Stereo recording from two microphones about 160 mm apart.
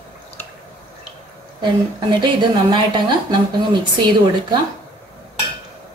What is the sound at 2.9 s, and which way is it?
Speech, 30° right (ahead or behind).